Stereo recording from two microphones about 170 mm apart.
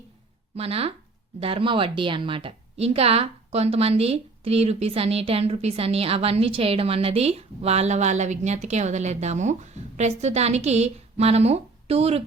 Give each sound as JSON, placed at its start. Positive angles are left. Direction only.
{"t": 0.5, "sound": "a woman's voice", "side_deg": -35}